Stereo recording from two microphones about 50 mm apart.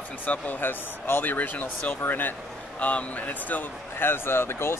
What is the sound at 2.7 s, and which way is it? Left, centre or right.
Speech, left.